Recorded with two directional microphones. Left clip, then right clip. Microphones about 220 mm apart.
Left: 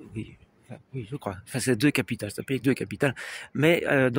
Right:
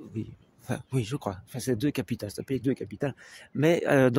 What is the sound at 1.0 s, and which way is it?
Speech, 10° right (ahead or behind).